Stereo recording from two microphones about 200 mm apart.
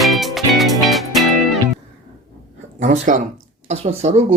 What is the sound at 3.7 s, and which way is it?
Speech, 35° right (ahead or behind).